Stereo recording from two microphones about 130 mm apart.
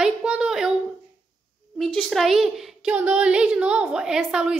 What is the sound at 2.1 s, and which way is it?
A woman's voice, centre (ahead or behind).